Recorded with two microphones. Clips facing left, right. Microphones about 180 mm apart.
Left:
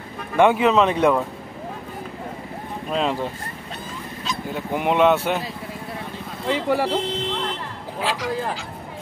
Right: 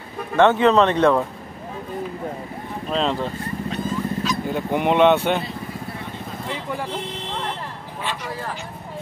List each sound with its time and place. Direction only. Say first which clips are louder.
0.4 s speech: right 1 dB; 10° left (ahead or behind)
2.9 s speech: right 1 dB; 10° left (ahead or behind)
4.5 s speech: right 1 dB; centre (ahead or behind)
6.4 s speech: left 9 dB; 85° left
8.0 s speech: left 4 dB; 90° left